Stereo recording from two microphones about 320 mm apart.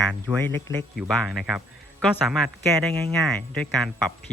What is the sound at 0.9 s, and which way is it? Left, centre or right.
Speech, centre.